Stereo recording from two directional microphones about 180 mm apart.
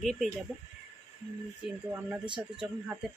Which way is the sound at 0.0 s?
Centre (ahead or behind).